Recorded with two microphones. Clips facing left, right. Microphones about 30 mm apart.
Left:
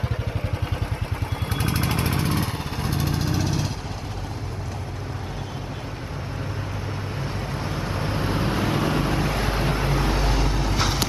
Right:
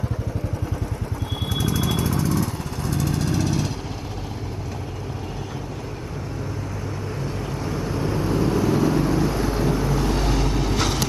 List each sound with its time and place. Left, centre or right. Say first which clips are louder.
1.5 s vehicle: right 2 dB; left
2.8 s vehicle: right 2 dB; left; by 3.7 s centre
7.5 s vehicle: right 2 dB; left
10.1 s vehicle: right 2 dB; centre